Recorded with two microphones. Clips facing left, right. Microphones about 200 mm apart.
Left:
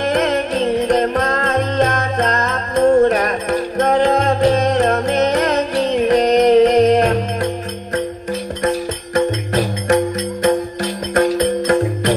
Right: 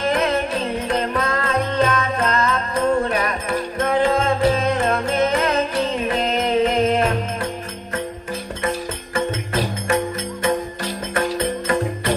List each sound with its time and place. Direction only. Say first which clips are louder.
0.1 s music: left 4 dB; 40° left (ahead or behind)
11.1 s music: left 7 dB; 40° left (ahead or behind)